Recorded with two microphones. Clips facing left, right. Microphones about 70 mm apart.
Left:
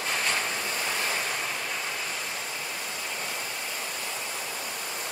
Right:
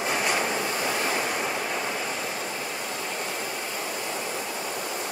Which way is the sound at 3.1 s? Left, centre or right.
Centre.